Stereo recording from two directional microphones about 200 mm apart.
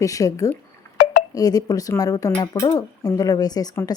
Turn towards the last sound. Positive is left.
turn(degrees=15)  # may be behind; listen again after turning